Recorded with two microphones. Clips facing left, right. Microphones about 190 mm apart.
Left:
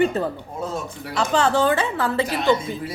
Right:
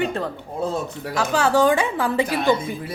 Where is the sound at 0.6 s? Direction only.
40° right (ahead or behind).